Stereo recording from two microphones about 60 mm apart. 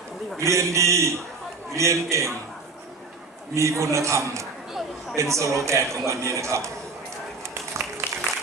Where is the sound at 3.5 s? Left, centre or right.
Right.